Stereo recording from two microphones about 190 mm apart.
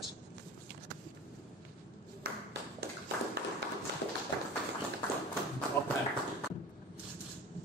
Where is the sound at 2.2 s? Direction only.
60° right (ahead or behind).